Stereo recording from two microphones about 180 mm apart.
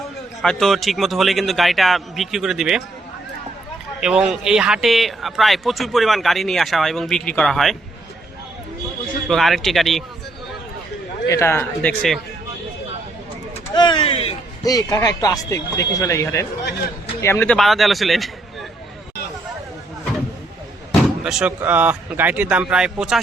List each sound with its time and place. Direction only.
0.4 s a man's voice: centre (ahead or behind)
4.0 s a man's voice: 5° right (ahead or behind)
9.2 s a man's voice: centre (ahead or behind)
11.3 s a man's voice: 15° left (ahead or behind)
13.7 s a sound: 25° left (ahead or behind)
14.6 s a man's voice: 20° left (ahead or behind); by 18.3 s centre (ahead or behind)
21.2 s a man's voice: 5° right (ahead or behind)